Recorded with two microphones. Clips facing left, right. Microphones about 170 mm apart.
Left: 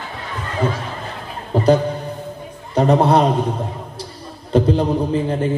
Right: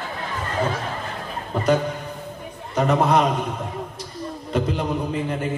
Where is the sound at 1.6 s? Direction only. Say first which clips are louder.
Left 5 dB; 30° left (ahead or behind).